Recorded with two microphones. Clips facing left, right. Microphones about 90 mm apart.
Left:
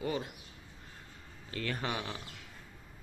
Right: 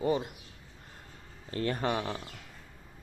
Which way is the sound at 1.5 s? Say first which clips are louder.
Right 6 dB; 35° right (ahead or behind).